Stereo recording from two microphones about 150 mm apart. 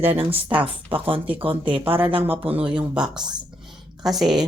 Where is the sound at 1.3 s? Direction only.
10° right (ahead or behind).